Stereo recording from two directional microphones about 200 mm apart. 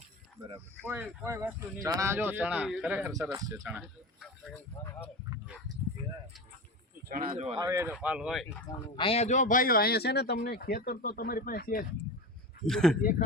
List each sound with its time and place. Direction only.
0.8 s speech: 10° right (ahead or behind)
3.1 s speech: 15° right (ahead or behind)
3.6 s speech: 5° right (ahead or behind)
4.8 s speech: 15° left (ahead or behind)
7.1 s speech: 45° right (ahead or behind)
7.6 s speech: 15° right (ahead or behind)
8.4 s speech: 25° left (ahead or behind); by 11.9 s 45° left (ahead or behind)
12.6 s speech: centre (ahead or behind)
13.0 s speech: 45° left (ahead or behind)